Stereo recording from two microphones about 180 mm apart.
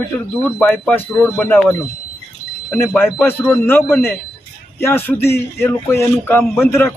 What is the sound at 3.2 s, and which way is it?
A man's voice, 5° left (ahead or behind).